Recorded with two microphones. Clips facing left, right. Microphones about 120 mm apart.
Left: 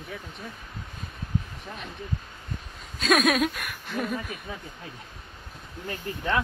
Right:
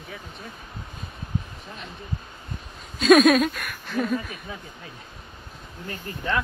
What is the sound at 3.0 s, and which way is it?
Speech, centre (ahead or behind).